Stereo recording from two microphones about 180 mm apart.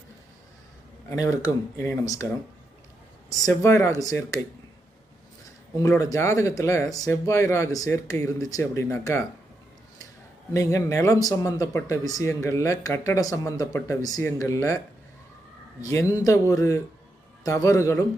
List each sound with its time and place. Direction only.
1.1 s speech: 20° left (ahead or behind)
3.2 s speech: 15° left (ahead or behind)
5.8 s speech: 20° left (ahead or behind)
10.5 s speech: 15° left (ahead or behind)
15.8 s speech: 15° left (ahead or behind)